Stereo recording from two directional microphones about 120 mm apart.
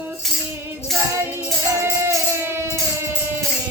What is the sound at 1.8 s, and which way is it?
Music, 20° right (ahead or behind).